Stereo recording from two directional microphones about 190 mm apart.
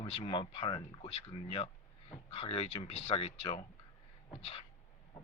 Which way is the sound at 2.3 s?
30° left (ahead or behind).